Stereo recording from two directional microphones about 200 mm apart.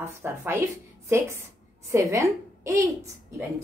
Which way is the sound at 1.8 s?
15° right (ahead or behind).